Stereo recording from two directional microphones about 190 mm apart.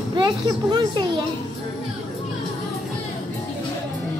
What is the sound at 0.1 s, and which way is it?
Speech, 20° right (ahead or behind).